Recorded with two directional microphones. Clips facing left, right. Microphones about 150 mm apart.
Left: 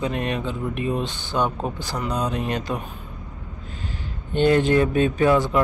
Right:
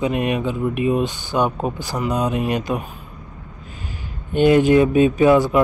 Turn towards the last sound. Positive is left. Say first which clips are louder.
# right 5 dB
turn(degrees=-10)  # may be behind; listen again after turning